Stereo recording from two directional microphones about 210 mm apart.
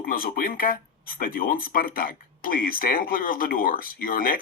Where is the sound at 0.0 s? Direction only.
45° left (ahead or behind).